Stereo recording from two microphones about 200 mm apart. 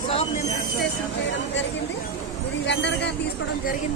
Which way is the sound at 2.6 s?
60° left (ahead or behind).